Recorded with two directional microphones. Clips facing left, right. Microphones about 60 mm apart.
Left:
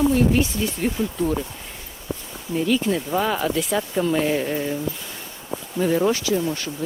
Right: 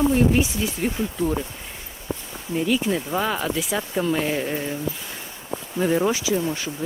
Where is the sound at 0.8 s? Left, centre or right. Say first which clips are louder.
Left 1 dB; centre.